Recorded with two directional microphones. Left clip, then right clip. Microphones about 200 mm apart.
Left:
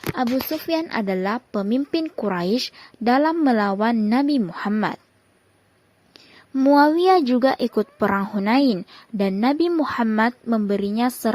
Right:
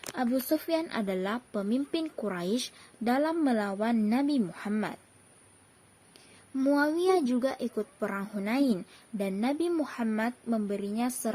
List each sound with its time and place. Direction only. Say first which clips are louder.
0.2 s speech: left 5 dB; 30° left (ahead or behind)
6.1 s speech: left 10 dB; 35° left (ahead or behind)